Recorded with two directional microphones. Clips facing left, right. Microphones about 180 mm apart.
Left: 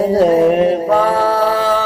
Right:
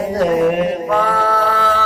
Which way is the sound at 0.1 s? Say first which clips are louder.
Left 2 dB; 30° left (ahead or behind).